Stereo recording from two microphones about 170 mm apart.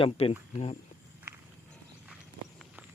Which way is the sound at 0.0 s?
35° left (ahead or behind).